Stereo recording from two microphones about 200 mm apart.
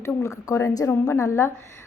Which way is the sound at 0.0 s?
15° left (ahead or behind).